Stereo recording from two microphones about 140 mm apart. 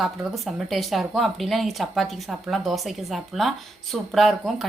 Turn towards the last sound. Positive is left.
turn(degrees=0)  # may be behind; listen again after turning